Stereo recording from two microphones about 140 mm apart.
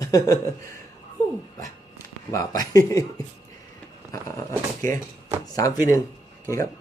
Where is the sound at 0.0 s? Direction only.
25° left (ahead or behind).